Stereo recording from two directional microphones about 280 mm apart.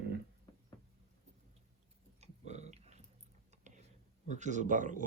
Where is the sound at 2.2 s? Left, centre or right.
Right.